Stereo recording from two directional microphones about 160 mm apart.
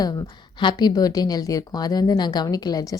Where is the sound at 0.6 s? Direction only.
30° left (ahead or behind).